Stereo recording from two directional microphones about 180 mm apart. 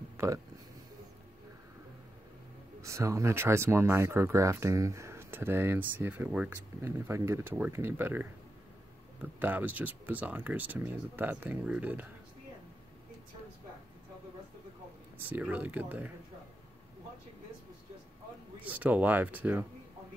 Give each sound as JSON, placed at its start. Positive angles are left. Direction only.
{"t": 0.2, "sound": "speech", "side_deg": -15}
{"t": 2.8, "sound": "speech", "side_deg": -15}
{"t": 15.1, "sound": "speech", "side_deg": -10}
{"t": 18.6, "sound": "speech", "side_deg": -10}